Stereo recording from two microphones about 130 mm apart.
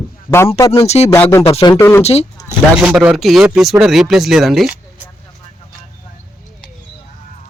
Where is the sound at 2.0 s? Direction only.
50° left (ahead or behind).